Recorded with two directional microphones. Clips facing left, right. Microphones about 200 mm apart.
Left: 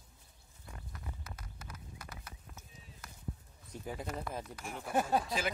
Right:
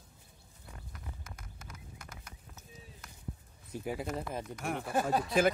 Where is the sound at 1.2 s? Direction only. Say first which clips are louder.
Left 1 dB; 50° right (ahead or behind).